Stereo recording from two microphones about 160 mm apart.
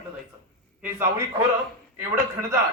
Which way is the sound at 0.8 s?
15° right (ahead or behind).